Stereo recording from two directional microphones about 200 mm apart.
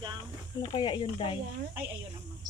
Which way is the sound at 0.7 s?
25° left (ahead or behind).